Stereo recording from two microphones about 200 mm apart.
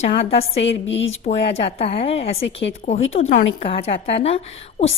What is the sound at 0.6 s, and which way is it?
Speech, 65° left (ahead or behind).